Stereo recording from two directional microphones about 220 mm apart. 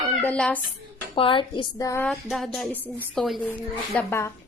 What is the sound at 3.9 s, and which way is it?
Speech, 10° left (ahead or behind).